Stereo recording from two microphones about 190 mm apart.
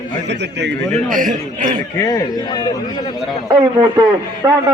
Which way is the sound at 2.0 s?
20° left (ahead or behind).